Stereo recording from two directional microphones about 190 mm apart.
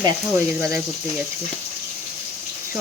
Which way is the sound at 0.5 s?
10° right (ahead or behind).